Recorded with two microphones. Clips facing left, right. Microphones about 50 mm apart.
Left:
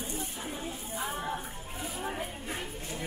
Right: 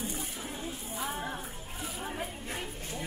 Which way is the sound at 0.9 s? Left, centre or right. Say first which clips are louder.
Left 2 dB; centre.